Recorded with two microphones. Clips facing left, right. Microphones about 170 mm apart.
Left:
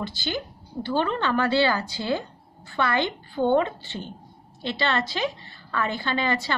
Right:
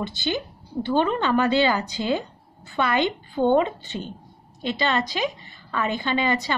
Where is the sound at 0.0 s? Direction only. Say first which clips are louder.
Right 3 dB; 20° right (ahead or behind).